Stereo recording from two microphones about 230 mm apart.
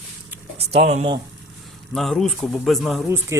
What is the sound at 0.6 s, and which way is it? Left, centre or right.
Speech, right.